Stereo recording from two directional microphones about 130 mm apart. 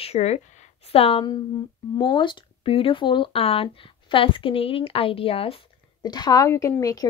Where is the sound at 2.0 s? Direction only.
40° left (ahead or behind).